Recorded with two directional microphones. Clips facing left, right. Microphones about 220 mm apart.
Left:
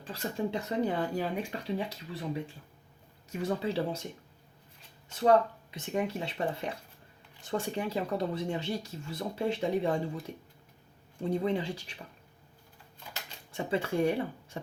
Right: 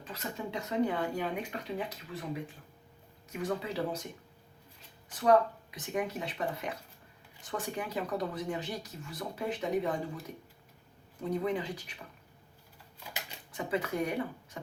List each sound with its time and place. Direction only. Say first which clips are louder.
0.0 s speech: left 5 dB; 30° left (ahead or behind)
3.4 s speech: left 3 dB; 30° left (ahead or behind)
5.0 s speech: left 1 dB; 25° left (ahead or behind)
11.2 s speech: left 2 dB; 30° left (ahead or behind)
13.5 s speech: left 2 dB; 30° left (ahead or behind)